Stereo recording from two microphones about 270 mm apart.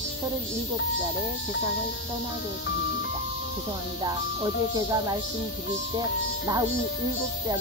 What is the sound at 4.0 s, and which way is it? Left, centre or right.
Music, centre.